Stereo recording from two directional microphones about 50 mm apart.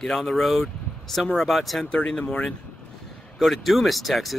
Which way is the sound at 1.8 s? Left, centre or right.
Left.